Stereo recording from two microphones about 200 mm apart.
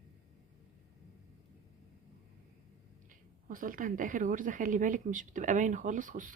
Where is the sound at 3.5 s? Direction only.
45° right (ahead or behind).